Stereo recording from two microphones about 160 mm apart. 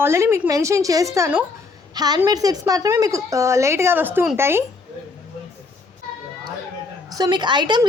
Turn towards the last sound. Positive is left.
turn(degrees=-30)  # may be behind; listen again after turning